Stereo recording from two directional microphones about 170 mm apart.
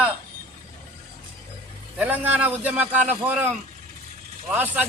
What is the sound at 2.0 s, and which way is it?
A man's voice, 10° right (ahead or behind).